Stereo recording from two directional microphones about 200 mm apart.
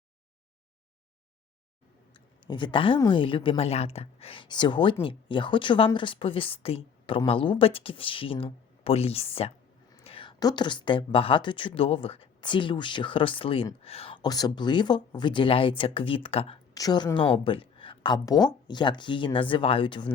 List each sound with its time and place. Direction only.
2.1 s a woman's voice: 25° left (ahead or behind)